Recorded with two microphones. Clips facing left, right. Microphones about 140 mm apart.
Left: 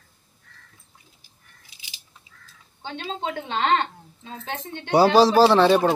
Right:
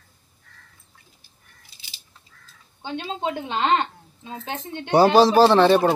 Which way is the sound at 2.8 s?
15° right (ahead or behind).